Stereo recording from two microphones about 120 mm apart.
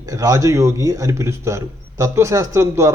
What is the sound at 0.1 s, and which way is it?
A man's voice, 25° right (ahead or behind).